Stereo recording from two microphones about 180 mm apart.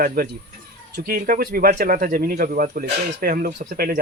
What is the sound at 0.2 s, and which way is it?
Speech, 55° right (ahead or behind).